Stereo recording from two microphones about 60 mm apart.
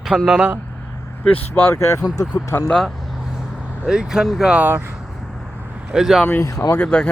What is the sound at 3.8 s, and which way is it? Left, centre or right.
Speech, centre.